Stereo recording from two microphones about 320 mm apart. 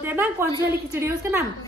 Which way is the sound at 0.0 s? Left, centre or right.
Centre.